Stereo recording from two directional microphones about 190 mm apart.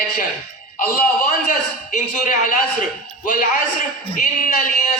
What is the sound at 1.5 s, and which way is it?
A man's voice, 45° left (ahead or behind).